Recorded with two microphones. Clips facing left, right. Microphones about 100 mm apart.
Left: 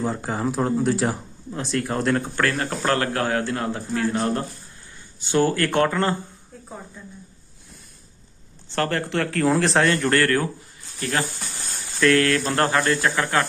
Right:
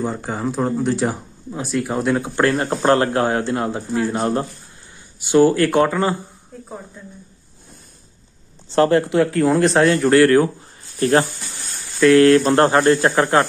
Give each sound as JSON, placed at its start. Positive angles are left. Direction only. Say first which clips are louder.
{"t": 0.0, "sound": "speech", "louder": "right 1 dB", "side_deg": 0}
{"t": 2.3, "sound": "speech", "louder": "right 6 dB", "side_deg": -25}
{"t": 8.7, "sound": "speech", "louder": "right 9 dB", "side_deg": -20}
{"t": 9.3, "sound": "speech", "louder": "even", "side_deg": 0}
{"t": 11.0, "sound": "speech", "louder": "right 10 dB", "side_deg": -30}
{"t": 12.0, "sound": "speech", "louder": "right 7 dB", "side_deg": -15}
{"t": 12.3, "sound": "speech", "louder": "right 8 dB", "side_deg": -30}